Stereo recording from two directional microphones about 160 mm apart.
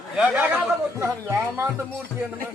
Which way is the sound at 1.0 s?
15° right (ahead or behind).